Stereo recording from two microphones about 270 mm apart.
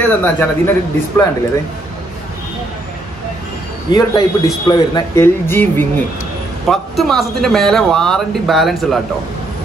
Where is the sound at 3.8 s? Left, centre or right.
Centre.